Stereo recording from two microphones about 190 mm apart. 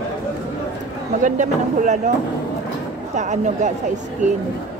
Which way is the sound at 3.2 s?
40° right (ahead or behind).